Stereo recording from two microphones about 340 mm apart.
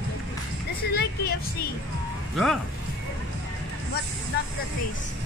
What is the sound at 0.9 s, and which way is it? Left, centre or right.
Vehicle, left.